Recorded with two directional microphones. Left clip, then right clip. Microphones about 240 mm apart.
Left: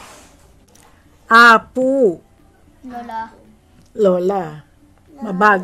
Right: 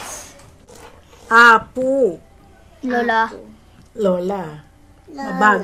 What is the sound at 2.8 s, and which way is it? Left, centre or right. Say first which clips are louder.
Speech: right 11 dB; right.